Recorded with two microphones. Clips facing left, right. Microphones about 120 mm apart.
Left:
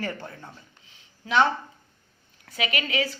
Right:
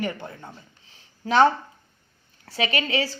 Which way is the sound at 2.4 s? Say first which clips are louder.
Right 3 dB; 30° right (ahead or behind).